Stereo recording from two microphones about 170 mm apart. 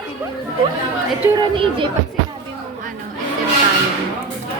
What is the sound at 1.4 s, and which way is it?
Speech, 30° right (ahead or behind).